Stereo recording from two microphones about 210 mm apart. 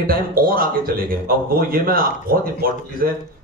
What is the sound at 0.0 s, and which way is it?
A man's voice, 45° right (ahead or behind).